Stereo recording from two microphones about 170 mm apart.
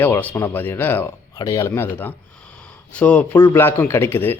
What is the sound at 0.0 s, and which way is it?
Speech, 10° left (ahead or behind).